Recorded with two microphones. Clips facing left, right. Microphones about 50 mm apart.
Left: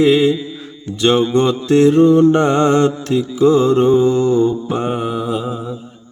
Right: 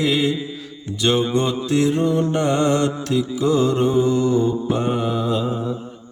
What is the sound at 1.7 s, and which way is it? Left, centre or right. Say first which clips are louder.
Mantra: left 9 dB; left.